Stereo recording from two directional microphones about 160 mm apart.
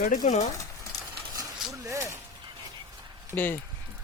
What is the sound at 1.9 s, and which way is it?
Speech, 20° right (ahead or behind).